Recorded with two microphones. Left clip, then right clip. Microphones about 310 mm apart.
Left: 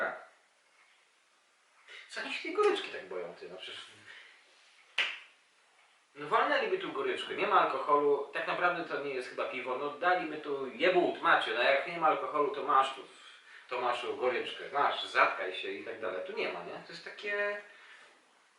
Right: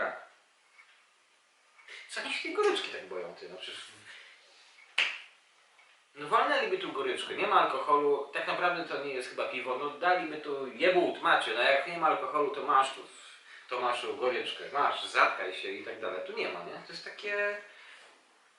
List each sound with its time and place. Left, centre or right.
2.1 s speech: centre
6.1 s speech: centre